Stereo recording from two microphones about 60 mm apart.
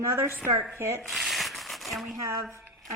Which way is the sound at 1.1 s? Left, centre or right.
Centre.